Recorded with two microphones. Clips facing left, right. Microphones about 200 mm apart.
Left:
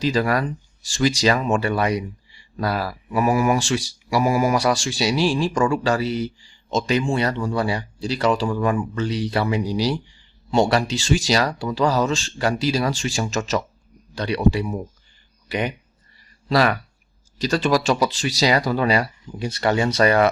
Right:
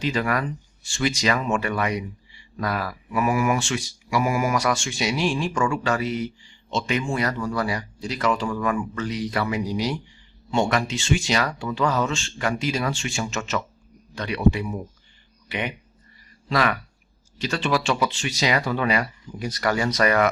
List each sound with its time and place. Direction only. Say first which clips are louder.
0.0 s speech: left 4 dB; 35° left (ahead or behind)